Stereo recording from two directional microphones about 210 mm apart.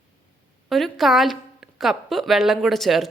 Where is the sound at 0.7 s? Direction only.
Centre (ahead or behind).